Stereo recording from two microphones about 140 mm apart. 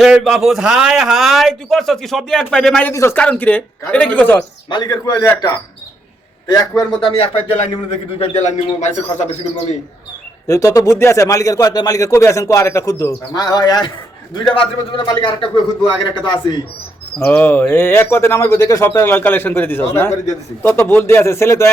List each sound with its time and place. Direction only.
0.0 s a man's voice: centre (ahead or behind)
2.9 s speech: 20° left (ahead or behind)
4.7 s a man's voice: 30° left (ahead or behind)
7.9 s a man's voice: 50° left (ahead or behind)
10.4 s a man's voice: 20° left (ahead or behind)
17.2 s speech: 15° left (ahead or behind)